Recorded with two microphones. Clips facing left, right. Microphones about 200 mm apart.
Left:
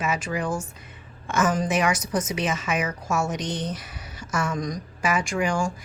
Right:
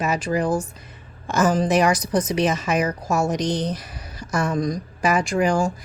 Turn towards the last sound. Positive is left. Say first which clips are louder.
# right 5 dB
turn(degrees=-35)  # may be behind; listen again after turning